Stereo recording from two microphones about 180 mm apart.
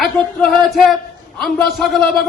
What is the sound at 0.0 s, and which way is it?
Music, centre (ahead or behind).